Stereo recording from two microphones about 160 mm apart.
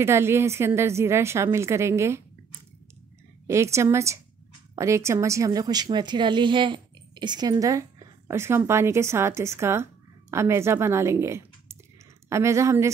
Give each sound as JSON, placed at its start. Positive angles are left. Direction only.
{"t": 0.0, "sound": "a woman's voice", "side_deg": -15}
{"t": 3.4, "sound": "a woman's voice", "side_deg": -15}